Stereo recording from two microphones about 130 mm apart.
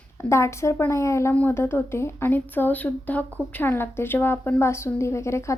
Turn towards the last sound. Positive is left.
turn(degrees=20)  # may be behind; listen again after turning